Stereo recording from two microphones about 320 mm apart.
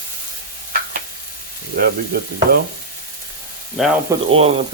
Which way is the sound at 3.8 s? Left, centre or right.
Centre.